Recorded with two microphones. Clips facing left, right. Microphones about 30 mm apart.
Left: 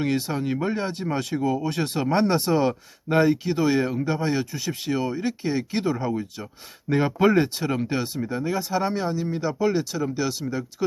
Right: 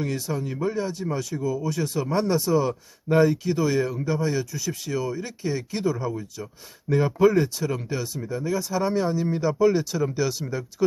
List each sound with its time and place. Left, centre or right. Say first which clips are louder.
0.0 s speech: left 3 dB; left
3.1 s speech: even; left
8.9 s speech: right 2 dB; centre